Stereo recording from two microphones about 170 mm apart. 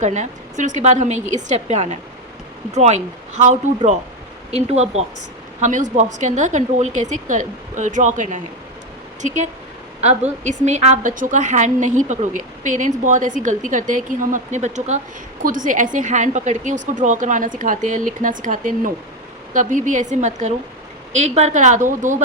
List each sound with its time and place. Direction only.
0.0 s a woman's voice: 45° right (ahead or behind)